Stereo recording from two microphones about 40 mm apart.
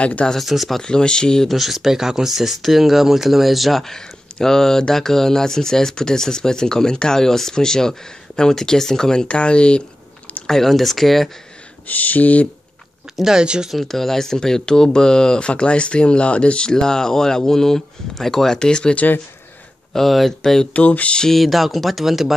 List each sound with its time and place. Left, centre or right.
0.0 s speech: left
0.4 s speech: centre
0.8 s speech: left
1.5 s speech: centre
3.8 s speech: centre
9.3 s speech: left
10.4 s speech: centre
11.9 s speech: left
13.2 s speech: centre
13.7 s speech: centre
18.6 s speech: left
19.9 s speech: centre
20.7 s speech: left
21.3 s speech: centre